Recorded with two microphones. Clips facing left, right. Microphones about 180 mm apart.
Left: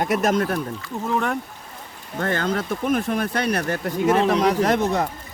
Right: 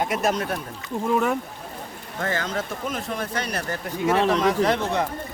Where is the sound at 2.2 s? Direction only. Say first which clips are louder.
Left 4 dB; 55° left (ahead or behind).